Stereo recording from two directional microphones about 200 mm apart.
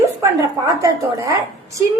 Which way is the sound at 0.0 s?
15° right (ahead or behind).